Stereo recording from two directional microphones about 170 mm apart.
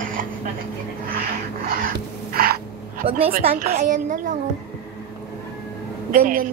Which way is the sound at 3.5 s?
60° right (ahead or behind).